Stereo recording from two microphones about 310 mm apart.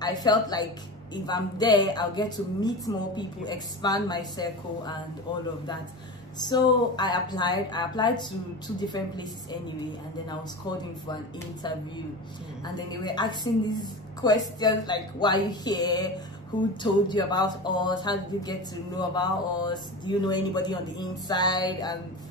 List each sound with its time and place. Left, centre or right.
0.0 s speech: centre
12.6 s speech: centre